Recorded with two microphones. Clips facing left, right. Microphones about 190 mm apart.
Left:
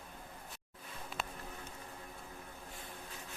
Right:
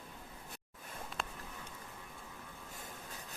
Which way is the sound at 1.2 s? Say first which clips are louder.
Even; 5° left (ahead or behind).